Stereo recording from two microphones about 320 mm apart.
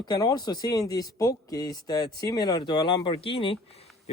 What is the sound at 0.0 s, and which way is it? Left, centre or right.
Speech, centre.